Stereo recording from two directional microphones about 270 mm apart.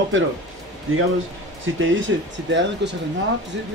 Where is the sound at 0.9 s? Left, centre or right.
Right.